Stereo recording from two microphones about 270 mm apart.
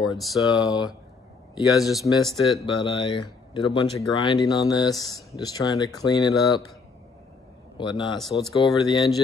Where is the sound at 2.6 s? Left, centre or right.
Centre.